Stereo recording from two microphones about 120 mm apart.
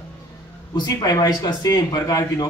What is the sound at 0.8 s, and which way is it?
A man's voice, 30° left (ahead or behind).